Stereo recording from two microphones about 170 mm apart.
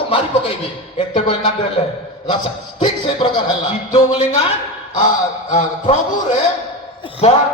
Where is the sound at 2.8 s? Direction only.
30° left (ahead or behind).